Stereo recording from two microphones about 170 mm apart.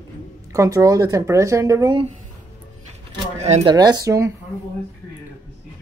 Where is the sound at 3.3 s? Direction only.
40° right (ahead or behind).